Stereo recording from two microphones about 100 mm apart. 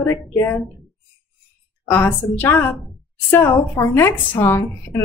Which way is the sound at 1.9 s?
15° left (ahead or behind).